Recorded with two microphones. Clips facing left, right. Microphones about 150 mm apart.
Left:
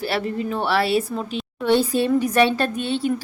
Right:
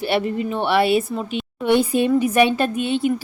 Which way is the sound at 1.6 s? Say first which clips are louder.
Right 1 dB; 15° right (ahead or behind).